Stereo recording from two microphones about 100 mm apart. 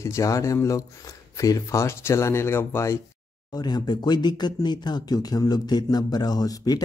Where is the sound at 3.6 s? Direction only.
45° left (ahead or behind).